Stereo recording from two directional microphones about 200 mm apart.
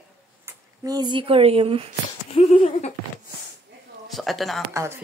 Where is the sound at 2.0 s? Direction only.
25° left (ahead or behind).